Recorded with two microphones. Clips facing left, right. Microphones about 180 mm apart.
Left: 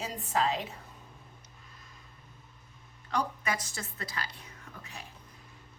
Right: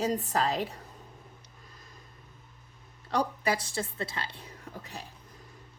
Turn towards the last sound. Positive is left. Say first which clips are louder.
# right 5 dB
turn(degrees=-35)  # may be behind; listen again after turning